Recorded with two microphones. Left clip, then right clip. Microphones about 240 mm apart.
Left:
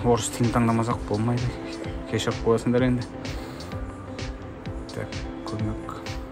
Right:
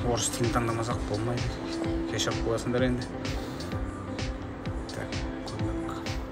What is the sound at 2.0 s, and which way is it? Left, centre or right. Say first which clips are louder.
Speech: left 9 dB; left.